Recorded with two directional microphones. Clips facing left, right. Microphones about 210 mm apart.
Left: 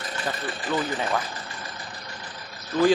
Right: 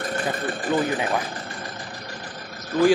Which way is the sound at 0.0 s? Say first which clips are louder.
Right 5 dB; 55° right (ahead or behind).